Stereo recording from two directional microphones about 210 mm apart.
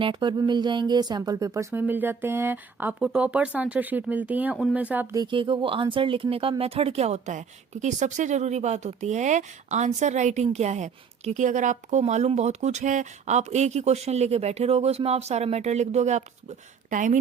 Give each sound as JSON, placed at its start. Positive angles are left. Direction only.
{"t": 0.0, "sound": "speech", "side_deg": -20}
{"t": 5.1, "sound": "speech", "side_deg": -20}